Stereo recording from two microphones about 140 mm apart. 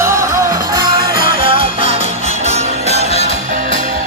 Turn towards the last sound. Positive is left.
turn(degrees=-50)  # may be behind; listen again after turning